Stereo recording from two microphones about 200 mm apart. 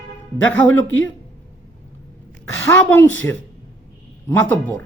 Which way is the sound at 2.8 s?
10° left (ahead or behind).